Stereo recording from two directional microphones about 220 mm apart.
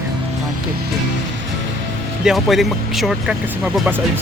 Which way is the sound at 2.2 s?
Centre (ahead or behind).